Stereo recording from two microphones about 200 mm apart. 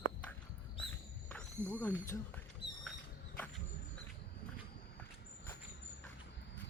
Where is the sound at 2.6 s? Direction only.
30° right (ahead or behind).